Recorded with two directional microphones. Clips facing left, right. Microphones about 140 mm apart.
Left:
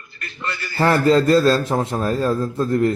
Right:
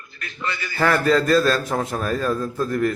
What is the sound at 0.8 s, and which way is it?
A man's voice, 30° left (ahead or behind).